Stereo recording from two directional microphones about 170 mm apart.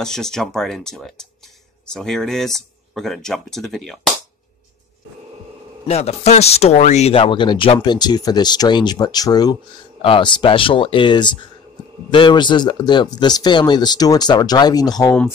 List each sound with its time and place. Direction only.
0.0 s speech: 5° left (ahead or behind)
5.9 s speech: 40° left (ahead or behind); by 15.1 s 20° left (ahead or behind)